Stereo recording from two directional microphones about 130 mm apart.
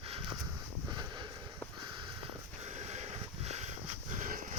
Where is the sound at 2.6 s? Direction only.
60° right (ahead or behind).